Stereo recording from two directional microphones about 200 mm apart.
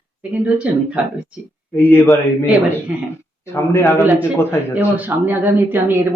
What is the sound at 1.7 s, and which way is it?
Speech, 10° left (ahead or behind).